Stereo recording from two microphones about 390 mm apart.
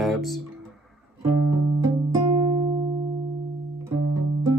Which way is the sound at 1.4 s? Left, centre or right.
Right.